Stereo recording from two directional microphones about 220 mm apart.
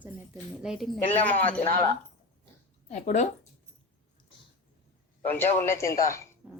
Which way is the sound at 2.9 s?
30° left (ahead or behind).